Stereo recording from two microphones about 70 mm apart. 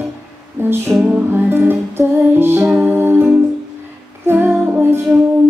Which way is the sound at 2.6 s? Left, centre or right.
Right.